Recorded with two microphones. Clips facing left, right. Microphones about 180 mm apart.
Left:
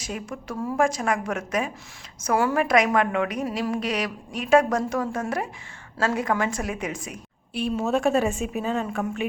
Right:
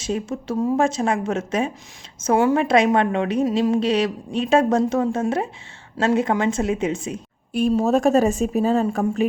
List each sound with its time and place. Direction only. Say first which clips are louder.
0.0 s a woman's voice: right 8 dB; 25° right (ahead or behind)
7.5 s a woman's voice: right 6 dB; 40° right (ahead or behind)